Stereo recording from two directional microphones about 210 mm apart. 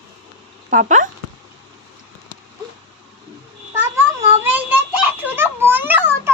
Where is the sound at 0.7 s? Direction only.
35° right (ahead or behind).